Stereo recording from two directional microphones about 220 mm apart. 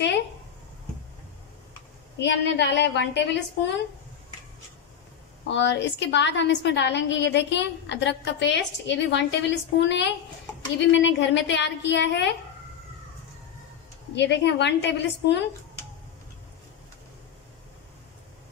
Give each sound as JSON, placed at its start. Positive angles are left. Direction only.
{"t": 2.1, "sound": "a woman's voice", "side_deg": 50}
{"t": 5.5, "sound": "a woman's voice", "side_deg": 55}
{"t": 14.1, "sound": "a woman's voice", "side_deg": 50}